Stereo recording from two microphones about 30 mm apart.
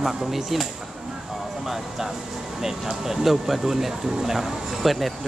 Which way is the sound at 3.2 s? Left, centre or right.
Centre.